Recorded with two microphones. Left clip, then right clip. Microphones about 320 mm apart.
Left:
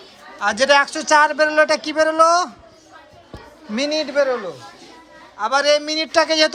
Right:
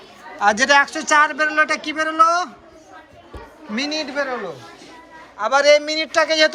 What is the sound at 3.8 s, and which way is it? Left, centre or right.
Speech, left.